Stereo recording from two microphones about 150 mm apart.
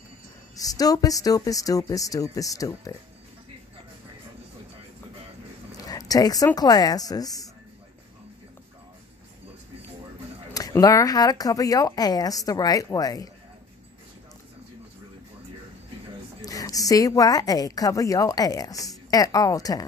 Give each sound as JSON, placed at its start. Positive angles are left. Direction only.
{"t": 0.6, "sound": "a woman's voice", "side_deg": 25}
{"t": 5.7, "sound": "speech", "side_deg": 25}
{"t": 10.5, "sound": "a woman's voice", "side_deg": 25}
{"t": 16.3, "sound": "a woman's voice", "side_deg": 25}